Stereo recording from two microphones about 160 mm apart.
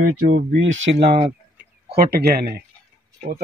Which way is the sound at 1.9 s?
75° right (ahead or behind).